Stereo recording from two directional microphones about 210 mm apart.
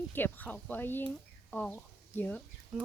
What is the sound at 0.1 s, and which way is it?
Speech, 10° left (ahead or behind).